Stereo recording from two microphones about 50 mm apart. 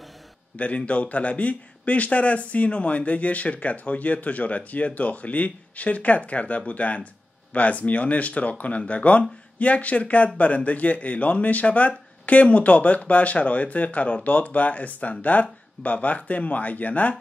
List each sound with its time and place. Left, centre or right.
0.6 s a man's voice: left